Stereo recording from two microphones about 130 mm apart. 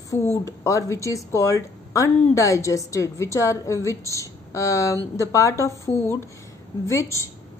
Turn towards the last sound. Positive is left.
turn(degrees=25)  # may be behind; listen again after turning